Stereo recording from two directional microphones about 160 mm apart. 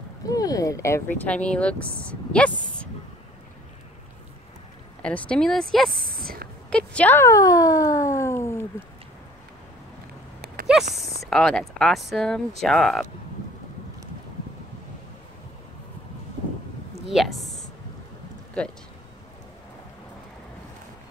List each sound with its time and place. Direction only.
0.3 s speech: 20° left (ahead or behind); by 2.9 s 5° left (ahead or behind)
5.0 s speech: 5° left (ahead or behind)
6.0 s speech: 65° right (ahead or behind)
6.7 s speech: 5° left (ahead or behind)
10.4 s a sound: 70° right (ahead or behind)
11.2 s speech: 5° left (ahead or behind)
17.1 s a woman's voice: centre (ahead or behind)